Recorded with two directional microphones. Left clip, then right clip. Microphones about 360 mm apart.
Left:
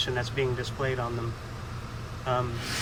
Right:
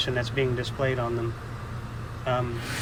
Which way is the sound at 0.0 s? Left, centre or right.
Centre.